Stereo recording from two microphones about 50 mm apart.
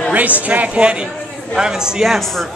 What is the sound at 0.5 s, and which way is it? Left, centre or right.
Speech, right.